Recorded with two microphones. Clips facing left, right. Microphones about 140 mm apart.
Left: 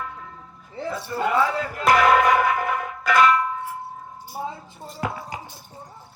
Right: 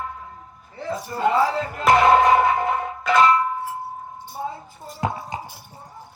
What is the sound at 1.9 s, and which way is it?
Music, 25° right (ahead or behind).